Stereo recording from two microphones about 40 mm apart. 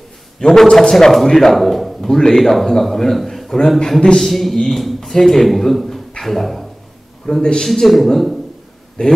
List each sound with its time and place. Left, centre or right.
0.4 s a man's voice: centre
2.0 s a man's voice: centre
7.3 s a man's voice: centre
9.0 s speech: left